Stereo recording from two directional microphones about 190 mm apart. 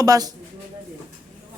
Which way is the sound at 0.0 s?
20° right (ahead or behind).